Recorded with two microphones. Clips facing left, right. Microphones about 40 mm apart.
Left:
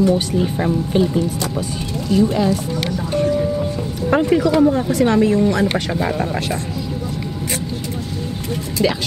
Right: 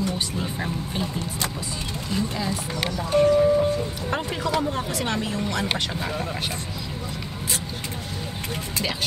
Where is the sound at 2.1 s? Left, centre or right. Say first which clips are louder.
Left 12 dB; left.